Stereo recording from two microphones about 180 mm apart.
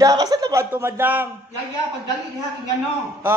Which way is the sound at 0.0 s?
20° right (ahead or behind).